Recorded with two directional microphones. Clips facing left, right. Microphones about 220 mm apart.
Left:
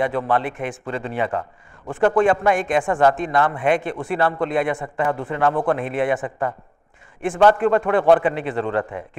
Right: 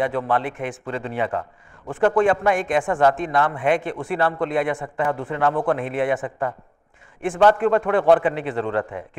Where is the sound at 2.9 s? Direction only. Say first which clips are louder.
Left 1 dB; 30° left (ahead or behind).